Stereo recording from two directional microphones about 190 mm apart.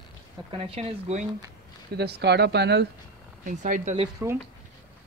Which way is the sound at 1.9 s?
60° right (ahead or behind).